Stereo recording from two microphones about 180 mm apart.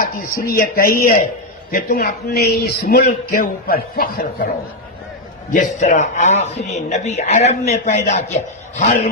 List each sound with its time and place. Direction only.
0.0 s a man's voice: 55° left (ahead or behind)
5.5 s a man's voice: 45° left (ahead or behind)